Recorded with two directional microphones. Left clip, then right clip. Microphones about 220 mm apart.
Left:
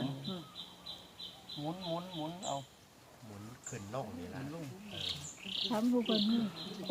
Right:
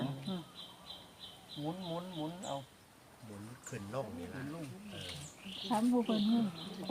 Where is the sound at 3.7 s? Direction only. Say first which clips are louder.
Right 1 dB; 50° right (ahead or behind).